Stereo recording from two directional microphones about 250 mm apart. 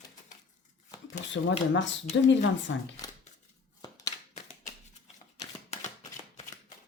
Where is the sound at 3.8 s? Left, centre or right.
Centre.